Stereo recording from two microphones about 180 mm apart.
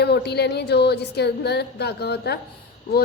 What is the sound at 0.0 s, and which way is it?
A woman's voice, 65° left (ahead or behind).